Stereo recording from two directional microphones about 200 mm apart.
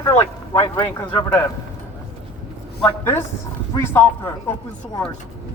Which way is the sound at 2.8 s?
10° left (ahead or behind).